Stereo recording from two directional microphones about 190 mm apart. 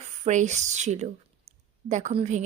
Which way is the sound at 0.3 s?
40° right (ahead or behind).